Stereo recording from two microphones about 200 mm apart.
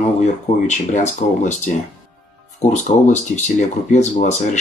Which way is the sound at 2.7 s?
35° left (ahead or behind).